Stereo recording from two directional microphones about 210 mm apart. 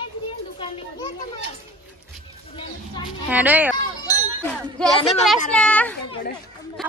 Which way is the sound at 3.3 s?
5° right (ahead or behind).